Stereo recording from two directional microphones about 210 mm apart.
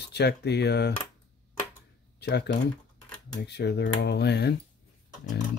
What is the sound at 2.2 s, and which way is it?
Speech, 55° left (ahead or behind).